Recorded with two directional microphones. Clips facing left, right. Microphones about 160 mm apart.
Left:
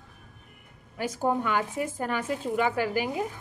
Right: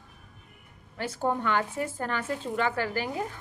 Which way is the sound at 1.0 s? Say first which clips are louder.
Left 2 dB; 10° left (ahead or behind).